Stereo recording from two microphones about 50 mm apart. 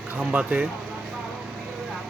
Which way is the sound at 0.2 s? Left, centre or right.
Right.